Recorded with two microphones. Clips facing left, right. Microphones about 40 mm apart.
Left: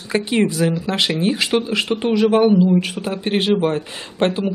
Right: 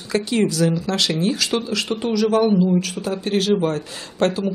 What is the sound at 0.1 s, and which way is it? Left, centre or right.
Speech, left.